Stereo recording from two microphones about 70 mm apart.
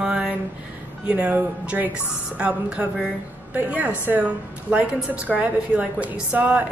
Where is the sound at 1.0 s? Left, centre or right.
Centre.